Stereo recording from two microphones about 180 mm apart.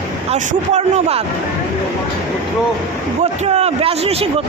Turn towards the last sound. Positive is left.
turn(degrees=-35)  # may be behind; listen again after turning